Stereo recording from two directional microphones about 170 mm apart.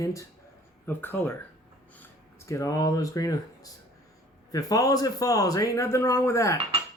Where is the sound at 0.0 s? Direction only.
20° left (ahead or behind).